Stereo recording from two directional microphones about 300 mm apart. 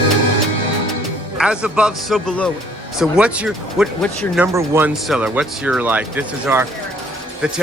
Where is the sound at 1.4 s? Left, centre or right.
Centre.